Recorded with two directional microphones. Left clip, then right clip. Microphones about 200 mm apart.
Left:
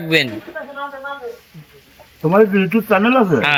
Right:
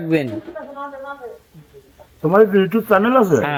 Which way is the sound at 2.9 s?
20° right (ahead or behind).